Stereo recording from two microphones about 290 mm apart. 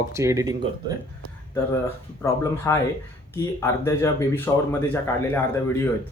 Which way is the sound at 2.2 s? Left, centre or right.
Centre.